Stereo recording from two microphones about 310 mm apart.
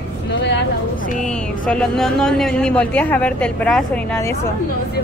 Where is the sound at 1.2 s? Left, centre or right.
Centre.